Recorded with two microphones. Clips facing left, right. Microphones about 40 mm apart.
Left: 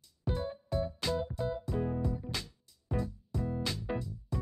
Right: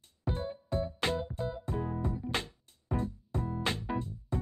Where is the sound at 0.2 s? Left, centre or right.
Right.